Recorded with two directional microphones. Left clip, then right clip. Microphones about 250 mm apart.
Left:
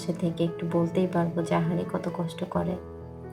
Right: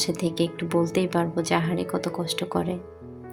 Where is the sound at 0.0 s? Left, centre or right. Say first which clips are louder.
Right 4 dB; right.